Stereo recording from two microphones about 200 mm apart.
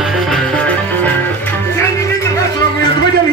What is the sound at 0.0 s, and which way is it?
Music, 5° left (ahead or behind).